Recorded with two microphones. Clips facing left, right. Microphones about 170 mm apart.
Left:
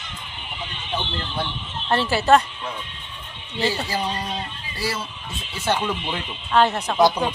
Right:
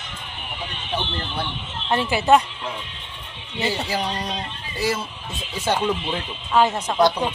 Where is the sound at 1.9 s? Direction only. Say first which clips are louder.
Even; 15° right (ahead or behind).